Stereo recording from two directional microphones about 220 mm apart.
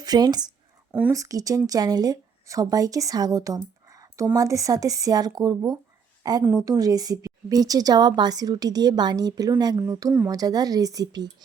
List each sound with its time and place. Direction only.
0.0 s a woman's voice: 20° right (ahead or behind)
0.9 s a woman's voice: 5° right (ahead or behind)
3.8 s a sound: 15° right (ahead or behind)
4.4 s a woman's voice: 15° right (ahead or behind)